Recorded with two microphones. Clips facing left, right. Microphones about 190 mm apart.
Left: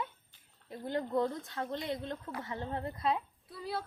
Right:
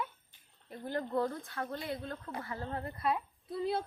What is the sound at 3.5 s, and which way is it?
Speech, 20° right (ahead or behind).